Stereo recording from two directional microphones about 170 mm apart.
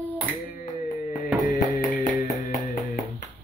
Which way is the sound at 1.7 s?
50° left (ahead or behind).